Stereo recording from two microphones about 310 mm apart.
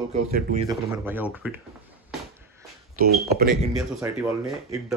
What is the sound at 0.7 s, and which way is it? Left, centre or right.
Speech, centre.